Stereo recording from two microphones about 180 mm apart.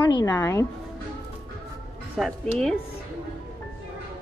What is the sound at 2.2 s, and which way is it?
Speech, centre (ahead or behind).